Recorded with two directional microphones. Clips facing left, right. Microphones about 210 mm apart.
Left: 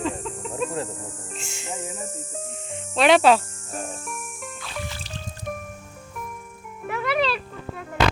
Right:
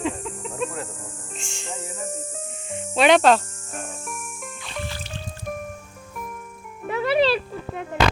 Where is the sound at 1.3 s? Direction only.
5° left (ahead or behind).